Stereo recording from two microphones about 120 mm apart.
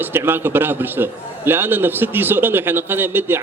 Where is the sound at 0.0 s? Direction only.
20° right (ahead or behind).